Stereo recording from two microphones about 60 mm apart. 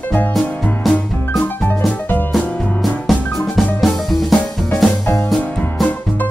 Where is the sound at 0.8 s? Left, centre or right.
Centre.